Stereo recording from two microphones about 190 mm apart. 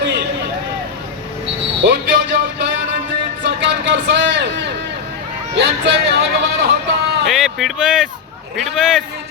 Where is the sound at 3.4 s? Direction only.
70° right (ahead or behind).